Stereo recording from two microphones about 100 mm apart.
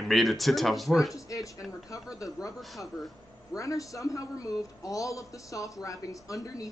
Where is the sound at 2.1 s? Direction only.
35° left (ahead or behind).